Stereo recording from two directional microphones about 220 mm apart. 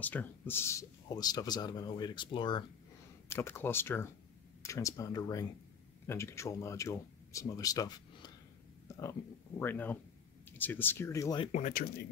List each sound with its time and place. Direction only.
0.0 s a man's voice: 10° left (ahead or behind)
3.3 s a man's voice: 10° left (ahead or behind)
9.6 s a man's voice: 10° left (ahead or behind)
11.5 s speech: 35° left (ahead or behind)